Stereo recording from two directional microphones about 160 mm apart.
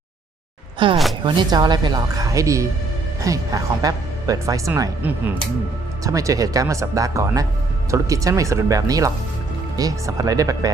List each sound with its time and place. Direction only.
0.8 s a woman's voice: 30° right (ahead or behind)